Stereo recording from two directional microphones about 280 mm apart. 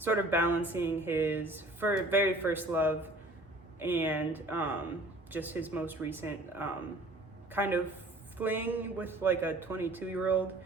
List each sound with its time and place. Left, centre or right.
0.0 s speech: centre